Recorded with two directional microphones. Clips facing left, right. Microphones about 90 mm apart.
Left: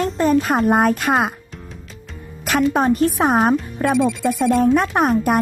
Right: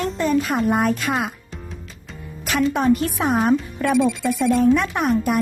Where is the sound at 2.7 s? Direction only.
35° left (ahead or behind).